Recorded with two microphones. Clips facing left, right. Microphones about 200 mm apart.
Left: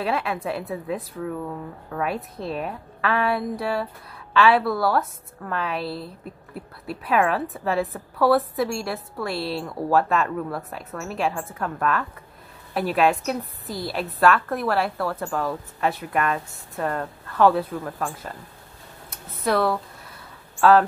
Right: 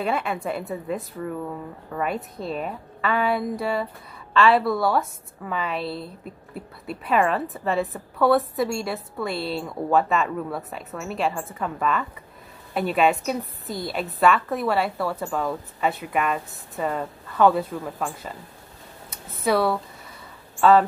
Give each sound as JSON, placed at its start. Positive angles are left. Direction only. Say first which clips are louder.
{"t": 0.0, "sound": "speech", "louder": "even", "side_deg": 0}